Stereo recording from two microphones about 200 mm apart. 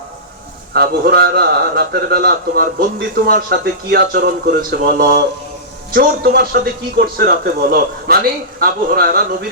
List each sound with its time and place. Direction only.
0.7 s a man's voice: 50° right (ahead or behind)